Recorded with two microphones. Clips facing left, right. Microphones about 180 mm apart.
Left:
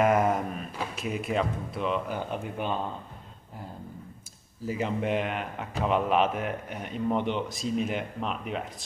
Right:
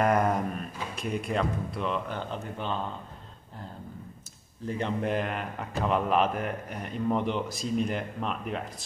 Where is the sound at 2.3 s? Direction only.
10° left (ahead or behind).